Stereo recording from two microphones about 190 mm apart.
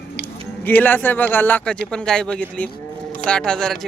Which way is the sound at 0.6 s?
10° left (ahead or behind).